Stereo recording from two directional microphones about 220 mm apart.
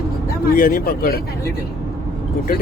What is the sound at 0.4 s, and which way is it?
Speech, 40° left (ahead or behind).